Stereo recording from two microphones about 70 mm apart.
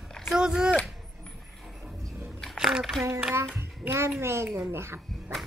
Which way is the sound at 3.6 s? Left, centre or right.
Right.